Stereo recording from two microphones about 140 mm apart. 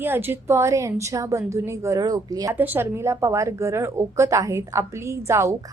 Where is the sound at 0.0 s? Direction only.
15° right (ahead or behind).